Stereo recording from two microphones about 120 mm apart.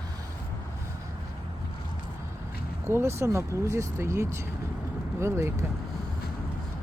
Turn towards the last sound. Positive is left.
turn(degrees=-25)  # may be behind; listen again after turning